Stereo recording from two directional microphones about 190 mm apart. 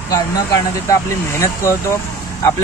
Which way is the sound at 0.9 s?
15° left (ahead or behind).